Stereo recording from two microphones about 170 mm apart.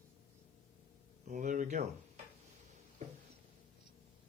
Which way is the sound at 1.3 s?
50° right (ahead or behind).